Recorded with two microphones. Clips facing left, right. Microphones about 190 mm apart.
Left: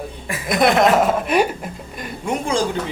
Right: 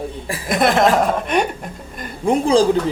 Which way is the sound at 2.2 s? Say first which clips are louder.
Right 7 dB; 30° right (ahead or behind).